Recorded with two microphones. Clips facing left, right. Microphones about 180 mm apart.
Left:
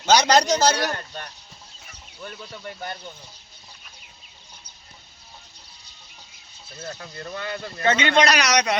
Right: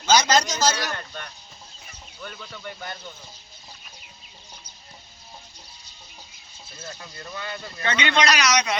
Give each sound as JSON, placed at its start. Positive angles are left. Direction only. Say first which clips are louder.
{"t": 0.0, "sound": "a sound", "louder": "left 2 dB", "side_deg": 65}
{"t": 0.6, "sound": "speech", "louder": "left 3 dB", "side_deg": 60}
{"t": 0.9, "sound": "speech", "louder": "left 3 dB", "side_deg": 35}
{"t": 6.7, "sound": "speech", "louder": "left 4 dB", "side_deg": 50}